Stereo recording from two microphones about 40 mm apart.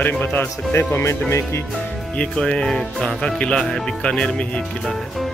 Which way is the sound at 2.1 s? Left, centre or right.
Left.